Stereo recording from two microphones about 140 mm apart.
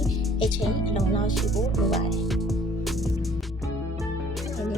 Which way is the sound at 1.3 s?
Centre (ahead or behind).